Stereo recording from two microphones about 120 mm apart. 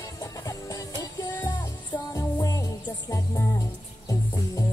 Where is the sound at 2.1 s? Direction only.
25° left (ahead or behind).